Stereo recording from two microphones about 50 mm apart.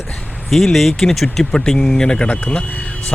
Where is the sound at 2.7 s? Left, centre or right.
Left.